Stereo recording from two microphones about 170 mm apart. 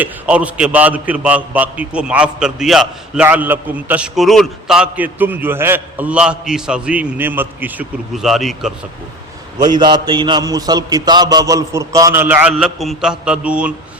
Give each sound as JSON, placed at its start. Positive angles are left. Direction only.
{"t": 0.0, "sound": "a man's voice", "side_deg": -10}
{"t": 9.6, "sound": "mantra", "side_deg": -25}